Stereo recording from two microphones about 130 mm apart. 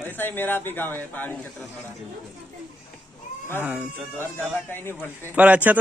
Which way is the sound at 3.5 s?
15° right (ahead or behind).